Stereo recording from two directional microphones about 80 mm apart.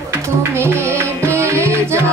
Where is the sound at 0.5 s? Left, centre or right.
Right.